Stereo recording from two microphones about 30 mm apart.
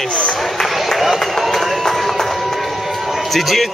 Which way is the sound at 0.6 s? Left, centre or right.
Centre.